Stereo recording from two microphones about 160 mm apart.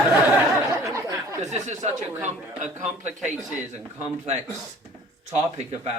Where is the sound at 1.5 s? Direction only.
45° right (ahead or behind).